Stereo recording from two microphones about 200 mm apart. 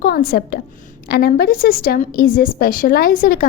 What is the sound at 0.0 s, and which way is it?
A woman's voice, 50° left (ahead or behind).